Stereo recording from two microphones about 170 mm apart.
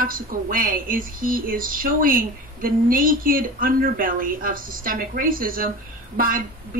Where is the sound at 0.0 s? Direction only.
55° right (ahead or behind).